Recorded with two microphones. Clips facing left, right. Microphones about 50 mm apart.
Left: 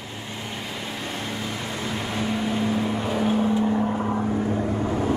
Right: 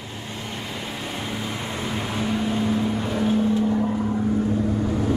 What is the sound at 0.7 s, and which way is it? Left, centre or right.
Vehicle, centre.